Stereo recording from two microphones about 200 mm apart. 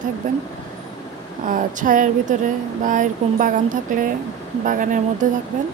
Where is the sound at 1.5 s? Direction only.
40° right (ahead or behind).